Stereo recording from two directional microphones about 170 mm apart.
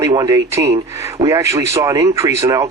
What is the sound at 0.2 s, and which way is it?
Speech, 20° right (ahead or behind).